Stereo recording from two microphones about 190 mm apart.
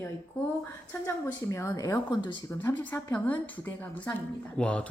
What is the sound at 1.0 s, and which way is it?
Speech, 15° left (ahead or behind).